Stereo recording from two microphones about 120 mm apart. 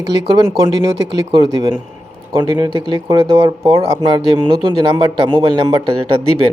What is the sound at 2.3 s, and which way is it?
Speech, 40° right (ahead or behind).